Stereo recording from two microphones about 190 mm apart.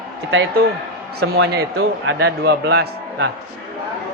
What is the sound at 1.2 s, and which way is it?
A man's voice, 55° right (ahead or behind).